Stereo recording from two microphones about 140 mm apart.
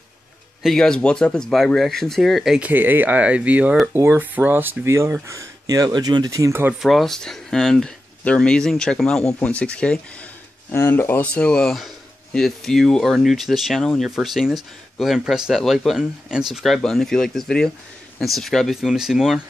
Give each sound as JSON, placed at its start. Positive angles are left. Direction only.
{"t": 0.6, "sound": "speech", "side_deg": 0}
{"t": 2.7, "sound": "speech", "side_deg": -15}
{"t": 6.8, "sound": "speech", "side_deg": 0}